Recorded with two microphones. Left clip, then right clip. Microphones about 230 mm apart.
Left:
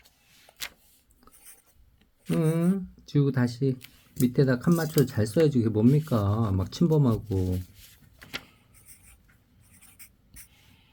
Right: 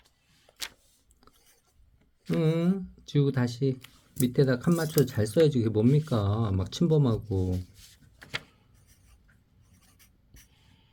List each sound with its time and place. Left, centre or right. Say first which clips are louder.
2.4 s speech: even; centre
10.0 s writing: left 6 dB; centre